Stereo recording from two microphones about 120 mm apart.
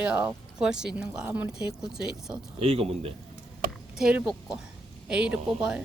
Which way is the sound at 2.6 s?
55° right (ahead or behind).